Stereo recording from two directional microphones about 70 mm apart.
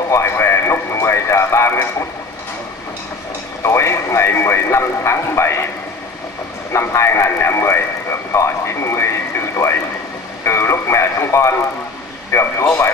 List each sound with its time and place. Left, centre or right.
0.1 s radio: left
3.6 s radio: left
6.7 s radio: left
10.4 s radio: left
12.3 s a sound: left